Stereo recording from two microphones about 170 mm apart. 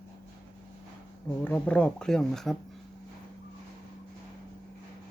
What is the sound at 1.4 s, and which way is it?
Speech, 10° left (ahead or behind).